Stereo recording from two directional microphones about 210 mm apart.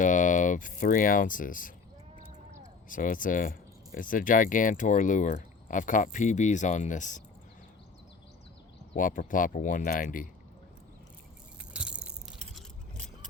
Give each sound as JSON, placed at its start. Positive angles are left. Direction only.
{"t": 0.0, "sound": "speech", "side_deg": 35}
{"t": 2.1, "sound": "a sound", "side_deg": -35}
{"t": 2.9, "sound": "speech", "side_deg": 40}
{"t": 9.0, "sound": "speech", "side_deg": 40}
{"t": 11.7, "sound": "biting", "side_deg": -5}